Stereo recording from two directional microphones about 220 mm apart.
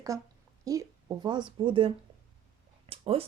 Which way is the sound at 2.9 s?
25° right (ahead or behind).